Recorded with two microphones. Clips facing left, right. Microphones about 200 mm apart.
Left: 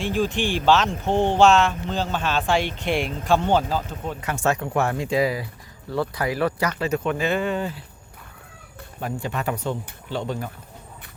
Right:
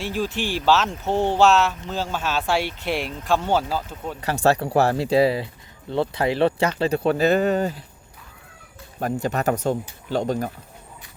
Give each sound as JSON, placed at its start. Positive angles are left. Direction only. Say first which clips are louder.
{"t": 0.0, "sound": "speech", "louder": "left 2 dB", "side_deg": -5}
{"t": 4.4, "sound": "speech", "louder": "right 4 dB", "side_deg": -35}
{"t": 9.0, "sound": "speech", "louder": "right 4 dB", "side_deg": -45}